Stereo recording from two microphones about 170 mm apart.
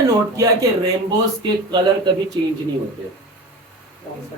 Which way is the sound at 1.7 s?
25° right (ahead or behind).